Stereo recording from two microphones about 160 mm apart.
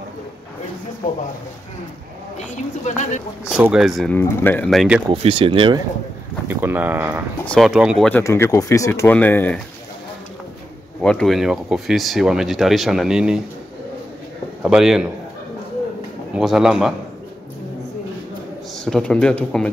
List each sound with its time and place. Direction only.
2.3 s speech: 50° left (ahead or behind)
3.5 s speech: 5° right (ahead or behind)
4.2 s speech: 15° left (ahead or behind)
4.6 s speech: 5° right (ahead or behind)
5.1 s speech: 35° right (ahead or behind)
6.4 s speech: 15° right (ahead or behind)
7.4 s speech: centre (ahead or behind)
8.1 s speech: 15° left (ahead or behind)
11.0 s speech: 5° left (ahead or behind)
14.6 s speech: 5° right (ahead or behind)
16.3 s speech: centre (ahead or behind)
18.9 s speech: 5° left (ahead or behind)